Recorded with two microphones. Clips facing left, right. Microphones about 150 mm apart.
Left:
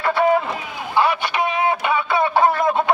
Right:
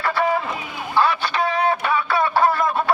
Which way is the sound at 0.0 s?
20° left (ahead or behind).